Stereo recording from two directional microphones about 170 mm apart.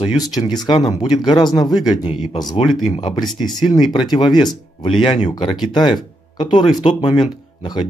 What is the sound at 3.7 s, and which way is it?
Speech, 25° left (ahead or behind).